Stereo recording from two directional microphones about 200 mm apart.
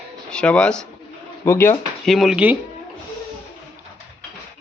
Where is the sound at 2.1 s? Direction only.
Centre (ahead or behind).